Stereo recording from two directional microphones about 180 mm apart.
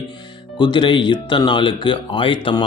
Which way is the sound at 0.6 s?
25° left (ahead or behind).